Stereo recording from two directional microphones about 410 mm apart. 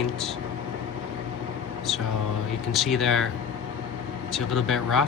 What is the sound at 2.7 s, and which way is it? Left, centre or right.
Speech, centre.